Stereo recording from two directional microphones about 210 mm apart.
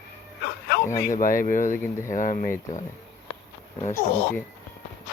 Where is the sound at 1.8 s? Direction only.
10° left (ahead or behind).